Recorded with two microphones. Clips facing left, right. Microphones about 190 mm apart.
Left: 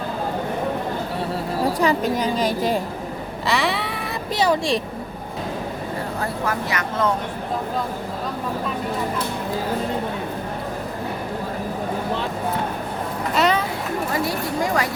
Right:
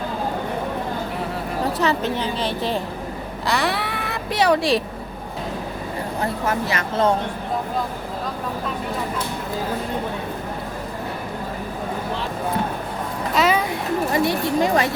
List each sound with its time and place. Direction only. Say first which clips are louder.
1.8 s a woman's voice: left 2 dB; 10° left (ahead or behind)
3.4 s a sound: even; centre (ahead or behind)
4.4 s speech: right 2 dB; centre (ahead or behind)
6.4 s speech: right 1 dB; 25° right (ahead or behind)
13.3 s a sound: right 1 dB; centre (ahead or behind)
14.1 s speech: right 5 dB; 25° right (ahead or behind)